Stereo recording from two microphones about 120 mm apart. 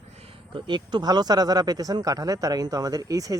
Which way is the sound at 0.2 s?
55° right (ahead or behind).